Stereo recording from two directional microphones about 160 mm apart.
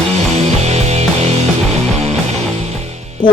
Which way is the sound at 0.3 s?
45° right (ahead or behind).